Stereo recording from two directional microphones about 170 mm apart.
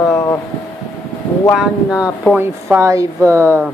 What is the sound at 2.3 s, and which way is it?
Speech, 15° right (ahead or behind).